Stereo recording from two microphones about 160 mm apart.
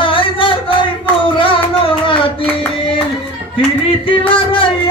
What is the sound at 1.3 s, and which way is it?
Music, 35° left (ahead or behind).